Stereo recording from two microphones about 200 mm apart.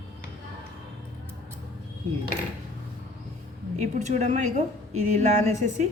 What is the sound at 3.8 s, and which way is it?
A woman's voice, 35° right (ahead or behind).